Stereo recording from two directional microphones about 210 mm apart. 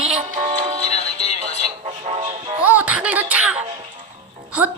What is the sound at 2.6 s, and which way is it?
Music, 5° right (ahead or behind).